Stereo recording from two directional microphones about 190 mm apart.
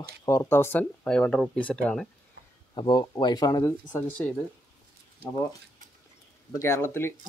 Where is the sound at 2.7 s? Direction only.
25° left (ahead or behind).